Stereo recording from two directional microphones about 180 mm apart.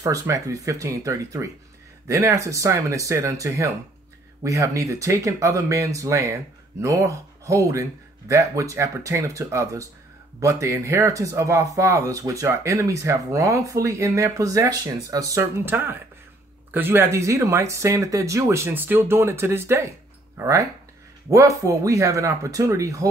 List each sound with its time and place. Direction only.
0.0 s speech: 20° right (ahead or behind)